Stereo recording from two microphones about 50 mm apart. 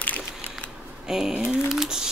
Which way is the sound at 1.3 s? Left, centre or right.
Right.